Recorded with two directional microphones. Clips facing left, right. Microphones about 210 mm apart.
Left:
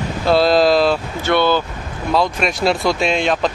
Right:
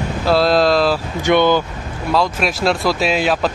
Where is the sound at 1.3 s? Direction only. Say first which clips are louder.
Right 2 dB; 15° right (ahead or behind).